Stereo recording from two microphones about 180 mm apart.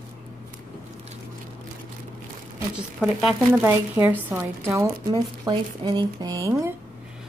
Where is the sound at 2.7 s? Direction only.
5° right (ahead or behind).